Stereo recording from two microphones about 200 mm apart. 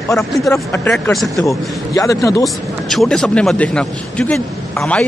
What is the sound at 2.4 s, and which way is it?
A man's voice, centre (ahead or behind).